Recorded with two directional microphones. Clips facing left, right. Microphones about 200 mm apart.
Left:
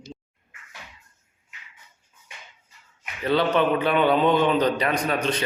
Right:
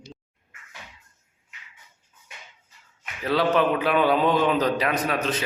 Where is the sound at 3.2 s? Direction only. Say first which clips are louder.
Even; centre (ahead or behind).